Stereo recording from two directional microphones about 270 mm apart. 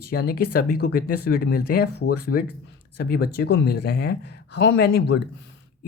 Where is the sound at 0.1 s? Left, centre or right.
Left.